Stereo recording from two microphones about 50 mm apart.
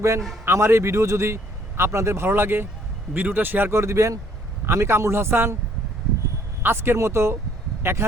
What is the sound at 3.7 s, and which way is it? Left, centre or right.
Speech, right.